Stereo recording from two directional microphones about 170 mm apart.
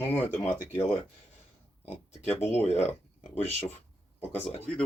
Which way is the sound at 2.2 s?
40° left (ahead or behind).